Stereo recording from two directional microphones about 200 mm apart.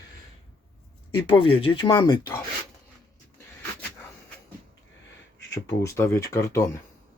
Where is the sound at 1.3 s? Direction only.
25° left (ahead or behind).